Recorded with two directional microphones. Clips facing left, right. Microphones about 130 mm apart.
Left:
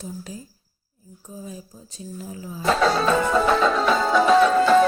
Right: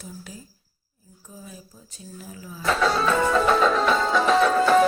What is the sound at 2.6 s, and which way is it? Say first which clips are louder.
Speech: left 2 dB; 30° left (ahead or behind).